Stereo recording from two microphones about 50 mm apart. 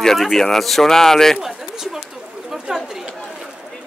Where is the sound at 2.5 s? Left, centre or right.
Centre.